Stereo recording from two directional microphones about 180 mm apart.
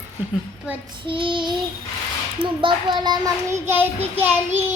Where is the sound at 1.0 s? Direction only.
30° right (ahead or behind).